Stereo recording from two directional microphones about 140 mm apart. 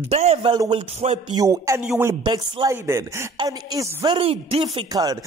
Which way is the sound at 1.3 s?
25° right (ahead or behind).